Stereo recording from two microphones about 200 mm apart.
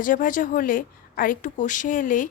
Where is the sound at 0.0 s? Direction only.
40° left (ahead or behind).